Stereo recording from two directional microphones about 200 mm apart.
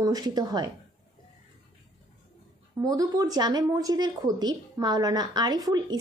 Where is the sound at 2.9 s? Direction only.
20° right (ahead or behind).